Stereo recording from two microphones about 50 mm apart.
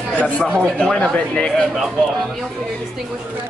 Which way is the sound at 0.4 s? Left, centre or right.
Centre.